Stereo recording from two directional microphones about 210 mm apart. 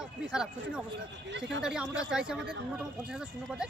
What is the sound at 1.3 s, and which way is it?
Speech, 60° right (ahead or behind).